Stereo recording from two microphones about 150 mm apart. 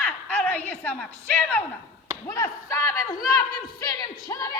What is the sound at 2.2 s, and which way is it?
Speech, 20° left (ahead or behind).